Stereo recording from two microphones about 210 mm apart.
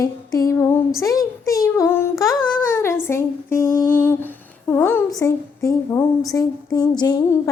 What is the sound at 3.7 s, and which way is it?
Humming, 40° left (ahead or behind).